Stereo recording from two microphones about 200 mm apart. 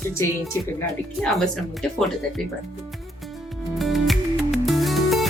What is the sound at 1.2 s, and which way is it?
Speech, 5° left (ahead or behind).